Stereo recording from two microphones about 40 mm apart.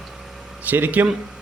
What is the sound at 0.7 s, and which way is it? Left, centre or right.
Speech, right.